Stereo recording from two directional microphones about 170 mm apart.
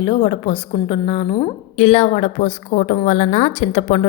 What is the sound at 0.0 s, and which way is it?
A woman's voice, 30° left (ahead or behind).